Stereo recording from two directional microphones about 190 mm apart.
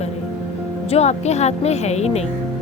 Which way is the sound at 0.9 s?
35° left (ahead or behind).